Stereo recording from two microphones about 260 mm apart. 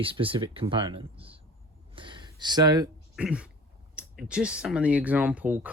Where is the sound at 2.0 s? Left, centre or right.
Centre.